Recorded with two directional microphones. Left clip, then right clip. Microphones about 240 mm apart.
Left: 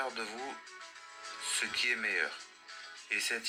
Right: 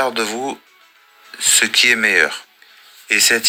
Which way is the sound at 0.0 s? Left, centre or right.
Right.